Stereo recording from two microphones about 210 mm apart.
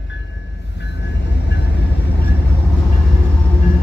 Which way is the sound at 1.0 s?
55° left (ahead or behind).